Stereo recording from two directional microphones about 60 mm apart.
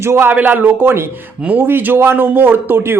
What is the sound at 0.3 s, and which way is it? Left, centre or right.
Speech, right.